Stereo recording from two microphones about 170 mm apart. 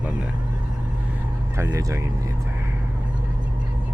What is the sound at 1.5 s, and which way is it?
Speech, 20° right (ahead or behind).